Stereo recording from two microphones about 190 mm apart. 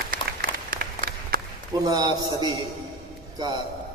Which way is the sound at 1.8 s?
20° right (ahead or behind).